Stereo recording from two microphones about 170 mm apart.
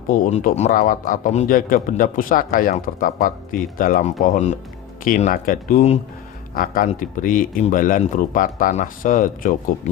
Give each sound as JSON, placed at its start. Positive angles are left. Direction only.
{"t": 0.1, "sound": "a man's voice", "side_deg": 45}